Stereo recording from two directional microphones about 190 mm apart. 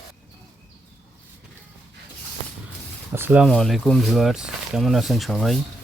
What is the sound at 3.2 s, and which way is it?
Speech, 10° right (ahead or behind).